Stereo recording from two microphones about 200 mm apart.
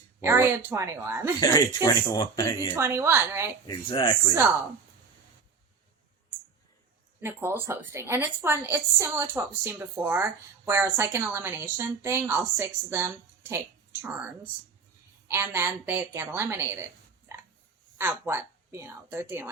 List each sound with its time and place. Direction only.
0.2 s a woman's voice: 10° right (ahead or behind)
1.4 s speech: 20° left (ahead or behind)
2.7 s a woman's voice: 15° right (ahead or behind)
3.7 s speech: 25° left (ahead or behind)
7.2 s a woman's voice: 10° right (ahead or behind)
15.3 s a woman's voice: 10° right (ahead or behind)
17.3 s a sound: 15° right (ahead or behind)
17.9 s a woman's voice: 10° right (ahead or behind)